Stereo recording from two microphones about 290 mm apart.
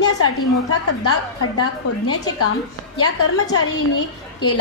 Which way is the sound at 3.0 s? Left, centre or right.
Left.